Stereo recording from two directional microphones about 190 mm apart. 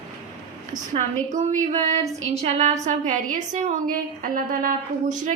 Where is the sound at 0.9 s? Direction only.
40° right (ahead or behind).